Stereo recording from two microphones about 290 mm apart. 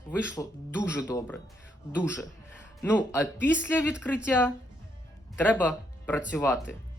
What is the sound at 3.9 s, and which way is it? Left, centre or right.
Speech, centre.